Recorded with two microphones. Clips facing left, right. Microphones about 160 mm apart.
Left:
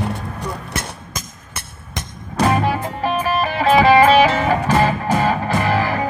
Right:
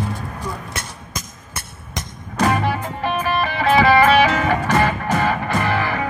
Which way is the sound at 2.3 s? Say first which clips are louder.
Left 2 dB; 35° left (ahead or behind).